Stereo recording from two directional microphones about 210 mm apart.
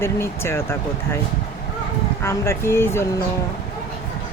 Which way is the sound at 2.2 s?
10° left (ahead or behind).